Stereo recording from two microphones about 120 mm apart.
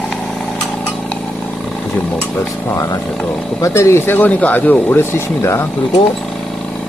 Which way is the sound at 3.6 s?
25° left (ahead or behind).